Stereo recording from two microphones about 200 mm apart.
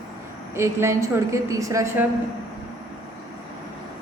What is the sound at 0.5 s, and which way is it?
A woman's voice, 15° right (ahead or behind).